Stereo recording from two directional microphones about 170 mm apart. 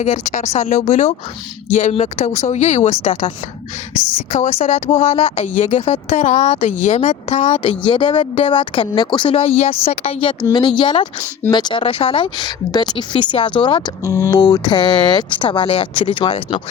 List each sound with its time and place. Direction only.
0.0 s speech: 45° left (ahead or behind)
7.6 s speech: 30° left (ahead or behind)
14.0 s speech: 15° right (ahead or behind)
14.3 s speech: 20° left (ahead or behind)